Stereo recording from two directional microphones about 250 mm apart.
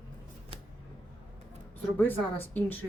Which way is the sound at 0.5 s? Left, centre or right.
Right.